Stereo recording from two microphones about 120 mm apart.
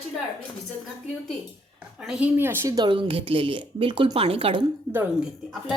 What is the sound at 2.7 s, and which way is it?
A woman's voice, 40° right (ahead or behind).